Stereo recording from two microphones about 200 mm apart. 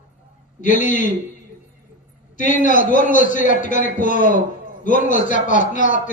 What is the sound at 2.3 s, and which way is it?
A man's voice, 40° left (ahead or behind).